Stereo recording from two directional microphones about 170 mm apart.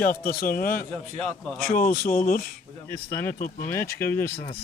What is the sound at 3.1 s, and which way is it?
Speech, 15° left (ahead or behind).